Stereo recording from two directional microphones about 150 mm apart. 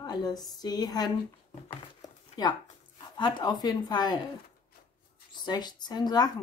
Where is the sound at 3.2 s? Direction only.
30° left (ahead or behind).